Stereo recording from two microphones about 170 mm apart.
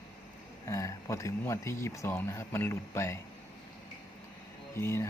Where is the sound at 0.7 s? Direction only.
15° left (ahead or behind).